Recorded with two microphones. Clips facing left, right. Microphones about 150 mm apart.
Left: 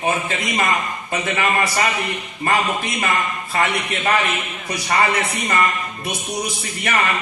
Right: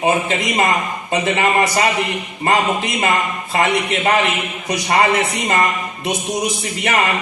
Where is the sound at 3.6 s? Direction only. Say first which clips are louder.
Right 4 dB; 30° right (ahead or behind).